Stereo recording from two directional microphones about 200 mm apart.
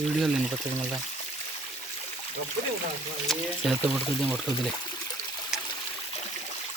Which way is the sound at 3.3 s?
Centre (ahead or behind).